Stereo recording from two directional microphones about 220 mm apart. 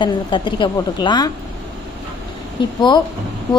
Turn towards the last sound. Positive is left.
turn(degrees=20)  # may be behind; listen again after turning